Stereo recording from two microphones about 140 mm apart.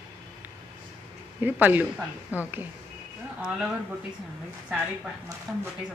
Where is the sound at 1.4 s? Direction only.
10° right (ahead or behind).